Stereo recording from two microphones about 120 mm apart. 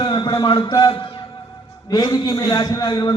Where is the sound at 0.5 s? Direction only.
35° left (ahead or behind).